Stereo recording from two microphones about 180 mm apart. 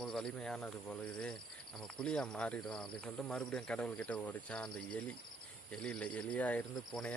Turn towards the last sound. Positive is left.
turn(degrees=5)  # may be behind; listen again after turning